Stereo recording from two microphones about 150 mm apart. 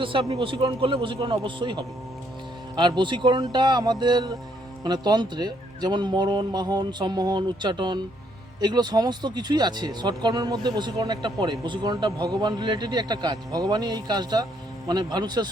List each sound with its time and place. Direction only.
0.0 s a man's voice: 35° right (ahead or behind)